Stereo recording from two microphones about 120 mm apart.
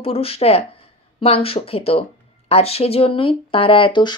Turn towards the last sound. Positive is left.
turn(degrees=45)  # may be behind; listen again after turning